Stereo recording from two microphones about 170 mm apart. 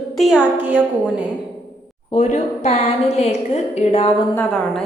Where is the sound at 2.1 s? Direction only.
40° left (ahead or behind).